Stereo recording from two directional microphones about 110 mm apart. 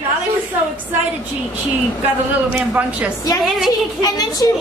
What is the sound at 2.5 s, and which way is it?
Speech, 15° right (ahead or behind).